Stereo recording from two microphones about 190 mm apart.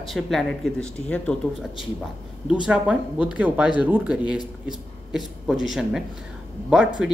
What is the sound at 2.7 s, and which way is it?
Speech, 5° right (ahead or behind).